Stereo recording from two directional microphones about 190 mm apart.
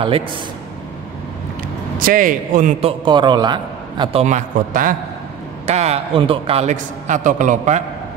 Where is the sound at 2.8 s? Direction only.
25° right (ahead or behind).